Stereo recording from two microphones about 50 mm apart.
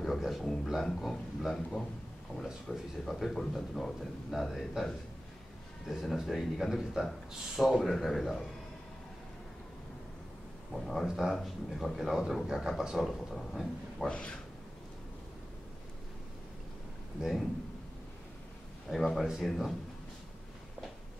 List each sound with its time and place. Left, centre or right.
0.0 s a man's voice: centre
2.7 s speech: centre
3.1 s speech: centre
10.7 s speech: centre
14.0 s speech: centre
17.2 s speech: centre
18.9 s speech: centre